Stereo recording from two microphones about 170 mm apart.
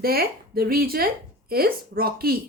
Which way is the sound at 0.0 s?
60° right (ahead or behind).